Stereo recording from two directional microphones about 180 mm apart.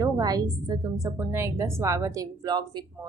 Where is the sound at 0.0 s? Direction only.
20° right (ahead or behind).